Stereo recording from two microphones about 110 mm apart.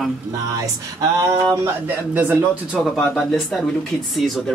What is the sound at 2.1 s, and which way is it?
Speech, 15° right (ahead or behind).